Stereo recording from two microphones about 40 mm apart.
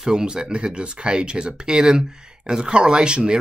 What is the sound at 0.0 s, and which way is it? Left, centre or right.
Speech, centre.